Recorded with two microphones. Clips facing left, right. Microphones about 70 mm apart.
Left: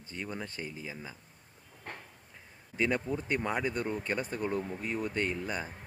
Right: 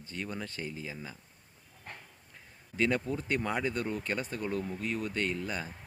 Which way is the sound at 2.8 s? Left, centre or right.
Centre.